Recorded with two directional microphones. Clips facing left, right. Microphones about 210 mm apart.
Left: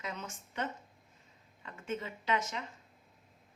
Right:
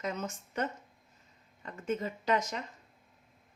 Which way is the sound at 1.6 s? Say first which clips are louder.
Right 5 dB; 40° right (ahead or behind).